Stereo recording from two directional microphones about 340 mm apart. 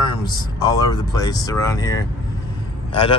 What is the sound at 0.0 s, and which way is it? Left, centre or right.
Speech, centre.